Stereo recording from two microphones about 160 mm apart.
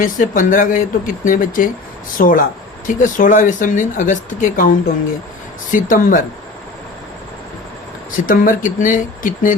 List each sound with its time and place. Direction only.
0.0 s speech: 55° left (ahead or behind)
5.7 s speech: 55° left (ahead or behind)
8.1 s speech: 55° left (ahead or behind)